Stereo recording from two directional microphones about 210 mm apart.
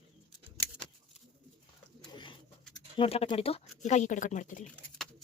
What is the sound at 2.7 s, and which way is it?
Speech, 25° left (ahead or behind).